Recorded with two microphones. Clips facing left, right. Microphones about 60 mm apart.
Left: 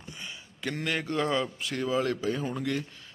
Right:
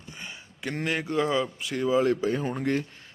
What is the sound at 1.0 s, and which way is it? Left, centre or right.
Speech, centre.